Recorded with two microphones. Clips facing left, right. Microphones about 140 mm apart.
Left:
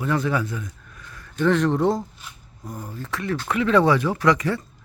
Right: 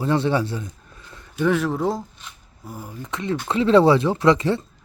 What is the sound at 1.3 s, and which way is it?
Speech, 10° right (ahead or behind).